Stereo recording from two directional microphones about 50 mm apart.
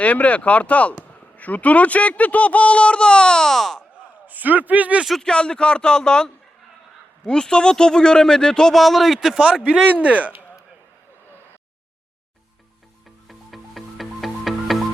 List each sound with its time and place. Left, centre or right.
0.0 s speech: left; by 3.8 s centre
3.9 s a man's voice: right
5.2 s speech: centre
8.7 s a man's voice: centre
9.6 s speech: right
13.2 s music: centre